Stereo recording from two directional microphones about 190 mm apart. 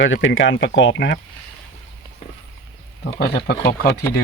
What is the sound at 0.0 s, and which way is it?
Speech, 80° left.